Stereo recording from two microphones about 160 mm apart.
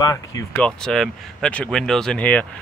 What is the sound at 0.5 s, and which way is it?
Speech, 5° left (ahead or behind).